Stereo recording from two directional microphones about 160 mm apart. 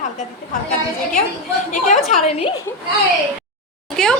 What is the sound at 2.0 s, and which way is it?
Speech, 40° left (ahead or behind).